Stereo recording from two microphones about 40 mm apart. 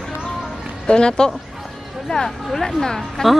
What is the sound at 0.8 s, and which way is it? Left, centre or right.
Speech, left.